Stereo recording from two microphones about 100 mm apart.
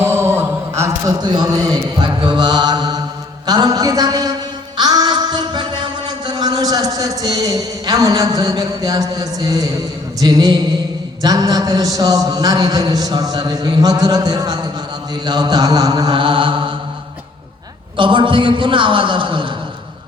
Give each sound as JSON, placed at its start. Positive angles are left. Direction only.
{"t": 0.0, "sound": "mantra", "side_deg": -25}
{"t": 1.2, "sound": "mantra", "side_deg": -45}
{"t": 3.4, "sound": "a man's voice", "side_deg": -45}
{"t": 4.8, "sound": "a sound", "side_deg": -45}
{"t": 10.2, "sound": "a man's voice", "side_deg": -40}
{"t": 15.3, "sound": "mantra", "side_deg": -45}
{"t": 17.9, "sound": "a man's voice", "side_deg": -55}